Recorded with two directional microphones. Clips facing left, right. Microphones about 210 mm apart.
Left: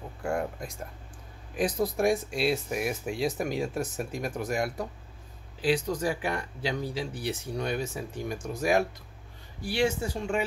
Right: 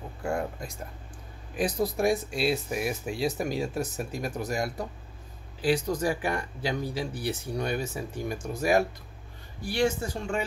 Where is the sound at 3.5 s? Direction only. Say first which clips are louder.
Even; centre (ahead or behind).